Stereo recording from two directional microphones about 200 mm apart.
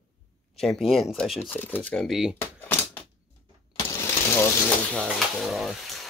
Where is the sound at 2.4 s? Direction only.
10° left (ahead or behind).